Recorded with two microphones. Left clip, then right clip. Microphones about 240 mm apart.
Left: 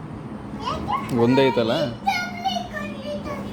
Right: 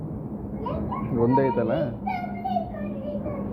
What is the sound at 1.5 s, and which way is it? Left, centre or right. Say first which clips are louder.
Speech: left 3 dB; left.